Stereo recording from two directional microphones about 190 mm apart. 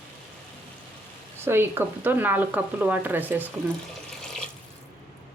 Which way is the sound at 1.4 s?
10° right (ahead or behind).